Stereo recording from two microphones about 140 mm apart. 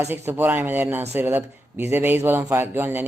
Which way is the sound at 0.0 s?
15° right (ahead or behind).